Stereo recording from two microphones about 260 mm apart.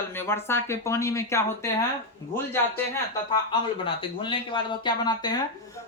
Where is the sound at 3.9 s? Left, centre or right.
Centre.